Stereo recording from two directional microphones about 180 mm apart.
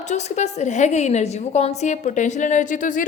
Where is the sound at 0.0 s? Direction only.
40° left (ahead or behind).